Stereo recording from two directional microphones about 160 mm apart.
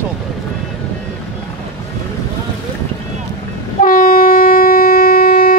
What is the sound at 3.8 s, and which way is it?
Train, 60° left (ahead or behind).